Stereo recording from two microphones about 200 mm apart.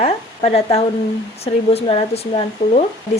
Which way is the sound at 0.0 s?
30° left (ahead or behind).